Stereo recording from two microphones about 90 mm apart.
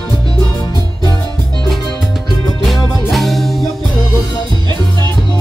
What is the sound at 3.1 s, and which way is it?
Music, centre (ahead or behind).